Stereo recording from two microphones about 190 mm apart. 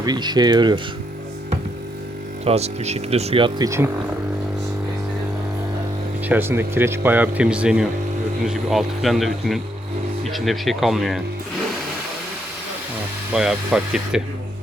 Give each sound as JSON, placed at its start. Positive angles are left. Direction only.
{"t": 0.0, "sound": "speech", "side_deg": -20}
{"t": 2.4, "sound": "speech", "side_deg": -35}
{"t": 6.2, "sound": "speech", "side_deg": -10}
{"t": 13.3, "sound": "speech", "side_deg": -5}